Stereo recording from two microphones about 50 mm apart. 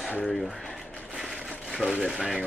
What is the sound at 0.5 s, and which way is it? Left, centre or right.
Speech, centre.